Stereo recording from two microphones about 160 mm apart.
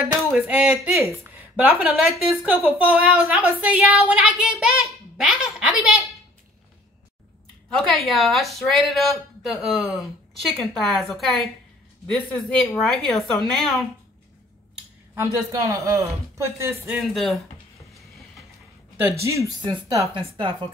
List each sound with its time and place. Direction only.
0.3 s a woman's voice: 5° right (ahead or behind)
7.7 s a woman's voice: centre (ahead or behind)
15.1 s a woman's voice: 20° right (ahead or behind)
16.9 s a woman's voice: centre (ahead or behind)
18.9 s speech: 15° right (ahead or behind); by 20.5 s 30° right (ahead or behind)